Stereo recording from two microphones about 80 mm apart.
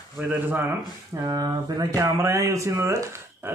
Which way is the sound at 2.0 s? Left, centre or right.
Right.